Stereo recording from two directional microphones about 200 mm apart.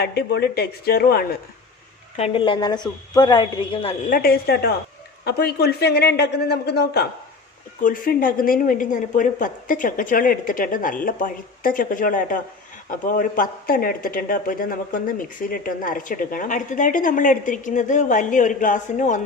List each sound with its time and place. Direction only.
0.0 s a woman's voice: 55° left (ahead or behind)
2.1 s speech: 30° left (ahead or behind)
4.1 s a woman's voice: 50° left (ahead or behind)
7.8 s a woman's voice: 40° left (ahead or behind)